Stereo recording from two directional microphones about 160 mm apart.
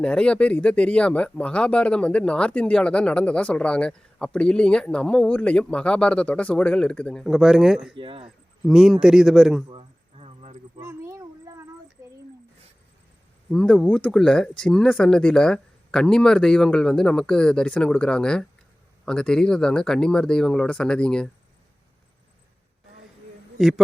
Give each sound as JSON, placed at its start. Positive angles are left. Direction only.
{"t": 0.0, "sound": "speech", "side_deg": 5}
{"t": 7.9, "sound": "speech", "side_deg": -35}
{"t": 8.6, "sound": "speech", "side_deg": 0}
{"t": 9.6, "sound": "a sound", "side_deg": -40}
{"t": 10.8, "sound": "a sound", "side_deg": -15}
{"t": 13.5, "sound": "speech", "side_deg": 5}
{"t": 23.6, "sound": "speech", "side_deg": 0}